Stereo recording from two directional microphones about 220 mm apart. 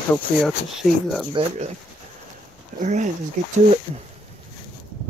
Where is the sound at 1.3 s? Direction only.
30° right (ahead or behind).